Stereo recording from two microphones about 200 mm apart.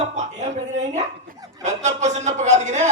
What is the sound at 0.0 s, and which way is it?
A man's voice, 35° right (ahead or behind).